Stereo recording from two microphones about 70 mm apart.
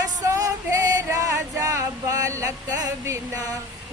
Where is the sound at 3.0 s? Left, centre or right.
Right.